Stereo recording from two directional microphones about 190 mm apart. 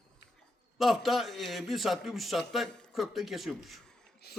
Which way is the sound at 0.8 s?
Centre (ahead or behind).